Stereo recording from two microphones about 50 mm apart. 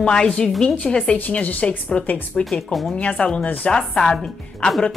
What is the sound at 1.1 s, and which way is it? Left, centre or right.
A woman's voice, left.